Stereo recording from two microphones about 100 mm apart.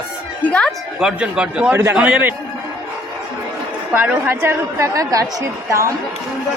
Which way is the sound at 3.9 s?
20° right (ahead or behind).